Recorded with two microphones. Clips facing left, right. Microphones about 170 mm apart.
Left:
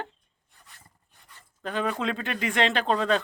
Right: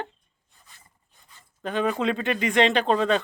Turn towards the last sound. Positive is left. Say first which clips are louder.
# right 3 dB
turn(degrees=0)  # may be behind; listen again after turning